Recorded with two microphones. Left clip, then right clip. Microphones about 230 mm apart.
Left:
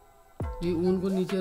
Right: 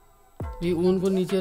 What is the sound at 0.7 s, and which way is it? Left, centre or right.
Speech, right.